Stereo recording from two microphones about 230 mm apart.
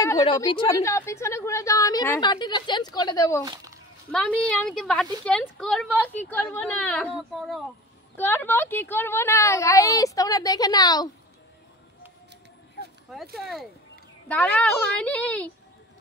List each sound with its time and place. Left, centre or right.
0.2 s a woman's voice: left
3.4 s a sound: centre
4.1 s a woman's voice: centre
13.1 s a woman's voice: centre